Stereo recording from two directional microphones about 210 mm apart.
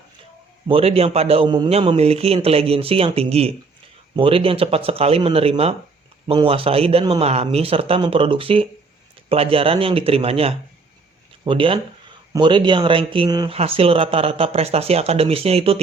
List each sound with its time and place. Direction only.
0.7 s a man's voice: 30° right (ahead or behind)